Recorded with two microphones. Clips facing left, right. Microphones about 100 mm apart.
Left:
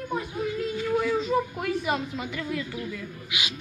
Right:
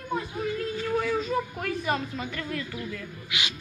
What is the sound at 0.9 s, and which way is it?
A man's voice, 15° left (ahead or behind).